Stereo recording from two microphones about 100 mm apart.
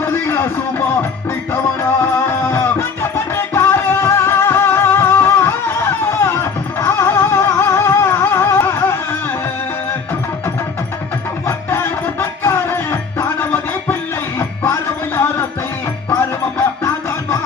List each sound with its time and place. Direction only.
0.0 s a sound: 25° left (ahead or behind)
2.2 s music: 20° left (ahead or behind)
11.4 s music: 20° left (ahead or behind)